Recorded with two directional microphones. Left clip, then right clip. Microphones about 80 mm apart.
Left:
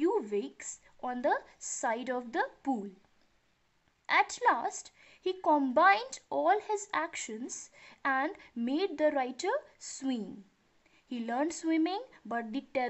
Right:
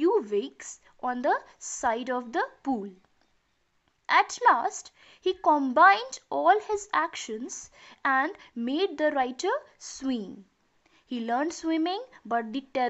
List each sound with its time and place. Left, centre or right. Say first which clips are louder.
0.0 s speech: right 6 dB; centre
4.0 s a woman's voice: right 5 dB; centre